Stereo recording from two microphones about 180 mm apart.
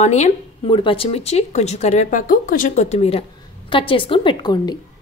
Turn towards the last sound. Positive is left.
turn(degrees=25)  # may be behind; listen again after turning